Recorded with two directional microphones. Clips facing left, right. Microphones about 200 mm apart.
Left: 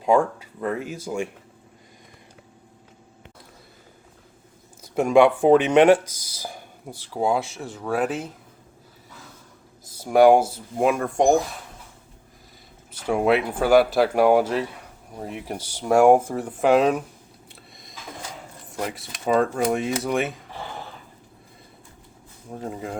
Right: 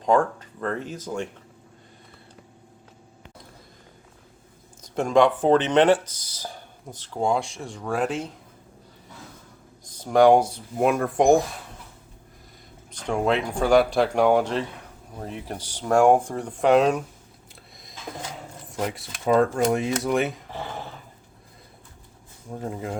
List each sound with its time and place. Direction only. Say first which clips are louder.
0.0 s speech: left 1 dB; 10° left (ahead or behind)
4.8 s speech: left 3 dB; 10° left (ahead or behind)
9.8 s speech: left 2 dB; 10° left (ahead or behind)
12.9 s speech: left 3 dB; 5° left (ahead or behind)
18.7 s speech: right 1 dB; centre (ahead or behind)
22.6 s speech: right 1 dB; centre (ahead or behind)